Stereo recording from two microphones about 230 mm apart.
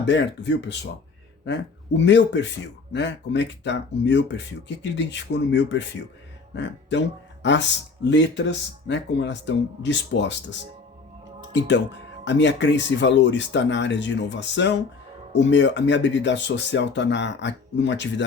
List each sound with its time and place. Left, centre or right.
0.0 s speech: left